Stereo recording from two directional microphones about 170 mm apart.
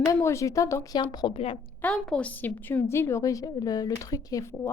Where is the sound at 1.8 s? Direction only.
5° left (ahead or behind).